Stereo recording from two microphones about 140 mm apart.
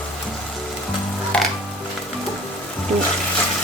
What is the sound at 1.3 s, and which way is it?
Music, 5° left (ahead or behind).